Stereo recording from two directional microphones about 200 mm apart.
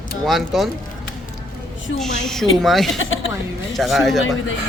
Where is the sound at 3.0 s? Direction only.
75° left (ahead or behind).